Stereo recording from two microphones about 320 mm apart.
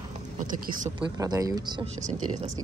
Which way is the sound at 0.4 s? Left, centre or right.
Right.